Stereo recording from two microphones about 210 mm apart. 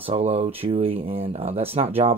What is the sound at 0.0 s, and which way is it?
Speech, 30° right (ahead or behind).